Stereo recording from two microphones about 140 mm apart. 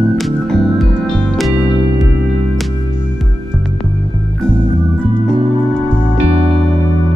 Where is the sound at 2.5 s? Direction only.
Centre (ahead or behind).